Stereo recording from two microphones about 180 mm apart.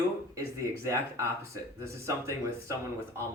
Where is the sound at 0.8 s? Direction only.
15° right (ahead or behind).